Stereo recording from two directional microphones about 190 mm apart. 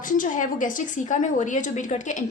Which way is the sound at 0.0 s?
45° left (ahead or behind).